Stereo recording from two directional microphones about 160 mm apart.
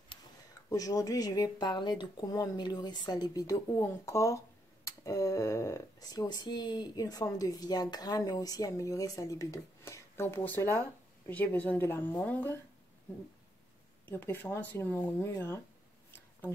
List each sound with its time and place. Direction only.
0.7 s speech: 20° left (ahead or behind)
14.0 s speech: 15° left (ahead or behind)
16.1 s a sound: 15° left (ahead or behind)